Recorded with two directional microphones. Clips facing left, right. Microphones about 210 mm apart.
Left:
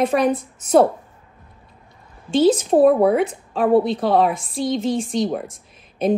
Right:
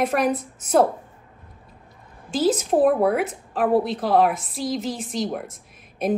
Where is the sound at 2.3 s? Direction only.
30° left (ahead or behind).